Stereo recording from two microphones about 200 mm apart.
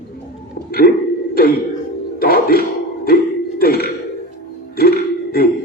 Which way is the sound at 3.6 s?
50° left (ahead or behind).